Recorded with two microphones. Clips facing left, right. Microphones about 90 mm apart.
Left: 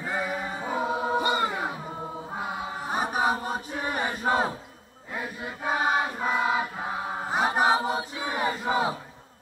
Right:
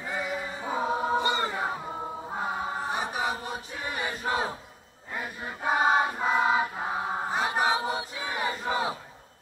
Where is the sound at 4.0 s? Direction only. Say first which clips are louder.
Left 4 dB; 25° left (ahead or behind).